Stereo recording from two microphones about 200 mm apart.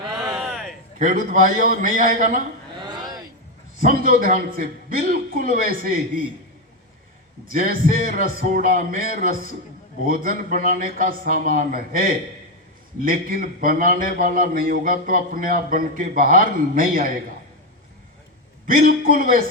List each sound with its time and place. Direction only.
0.3 s a sound: centre (ahead or behind)
0.9 s a man's voice: 40° right (ahead or behind)
2.8 s a sound: 20° right (ahead or behind)
3.8 s a man's voice: 45° right (ahead or behind)
7.4 s a man's voice: 45° right (ahead or behind)
10.1 s a man's voice: 40° right (ahead or behind)
18.6 s a man's voice: 45° right (ahead or behind)